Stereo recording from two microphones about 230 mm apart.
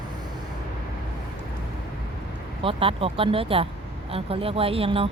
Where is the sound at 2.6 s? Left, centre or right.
Right.